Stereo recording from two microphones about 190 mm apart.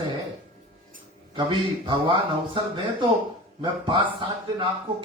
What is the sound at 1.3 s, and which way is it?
A man's voice, 25° right (ahead or behind).